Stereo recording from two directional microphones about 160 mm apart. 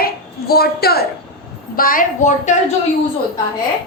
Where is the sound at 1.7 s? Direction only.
60° left (ahead or behind).